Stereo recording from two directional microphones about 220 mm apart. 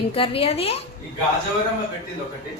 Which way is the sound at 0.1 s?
25° left (ahead or behind).